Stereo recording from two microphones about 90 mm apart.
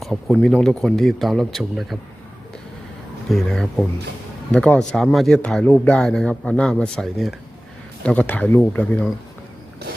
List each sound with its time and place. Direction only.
0.0 s speech: 5° left (ahead or behind)
3.2 s speech: 5° left (ahead or behind)
8.0 s speech: 15° left (ahead or behind)